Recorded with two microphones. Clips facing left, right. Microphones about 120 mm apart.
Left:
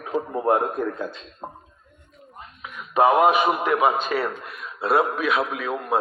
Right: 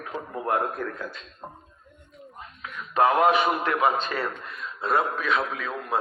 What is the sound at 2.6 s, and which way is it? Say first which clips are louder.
A man's voice: left 3 dB; 15° left (ahead or behind).